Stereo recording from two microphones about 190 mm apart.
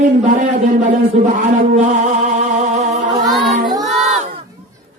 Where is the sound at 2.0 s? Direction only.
40° right (ahead or behind).